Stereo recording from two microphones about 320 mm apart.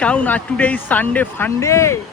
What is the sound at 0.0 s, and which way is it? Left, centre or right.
Speech, centre.